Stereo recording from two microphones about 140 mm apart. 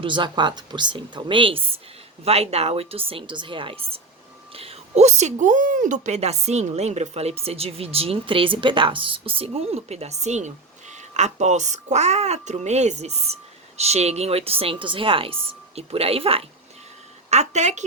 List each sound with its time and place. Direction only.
0.0 s a woman's voice: 35° right (ahead or behind)
17.2 s a woman's voice: 55° right (ahead or behind)